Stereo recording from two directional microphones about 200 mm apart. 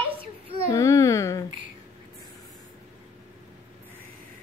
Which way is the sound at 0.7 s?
15° left (ahead or behind).